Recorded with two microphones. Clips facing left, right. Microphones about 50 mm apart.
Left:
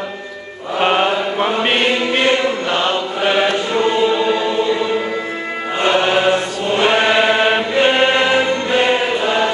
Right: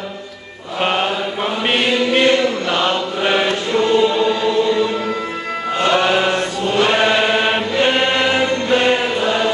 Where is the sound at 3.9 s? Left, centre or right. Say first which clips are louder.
Right 1 dB; centre.